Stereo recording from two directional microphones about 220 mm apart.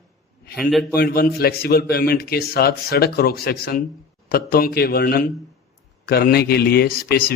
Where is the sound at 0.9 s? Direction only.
45° left (ahead or behind).